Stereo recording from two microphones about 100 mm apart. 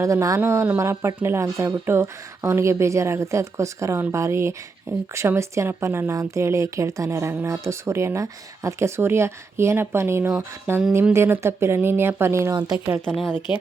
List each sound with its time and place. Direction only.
0.0 s a woman's voice: 30° right (ahead or behind)
13.5 s speech: 50° left (ahead or behind)